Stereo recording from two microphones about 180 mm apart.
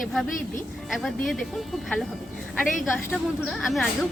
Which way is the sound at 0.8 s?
Centre (ahead or behind).